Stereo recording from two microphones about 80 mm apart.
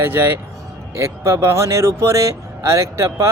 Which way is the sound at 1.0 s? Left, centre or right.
Right.